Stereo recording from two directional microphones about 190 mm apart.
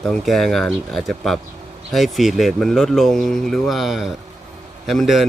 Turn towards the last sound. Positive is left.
turn(degrees=0)  # may be behind; listen again after turning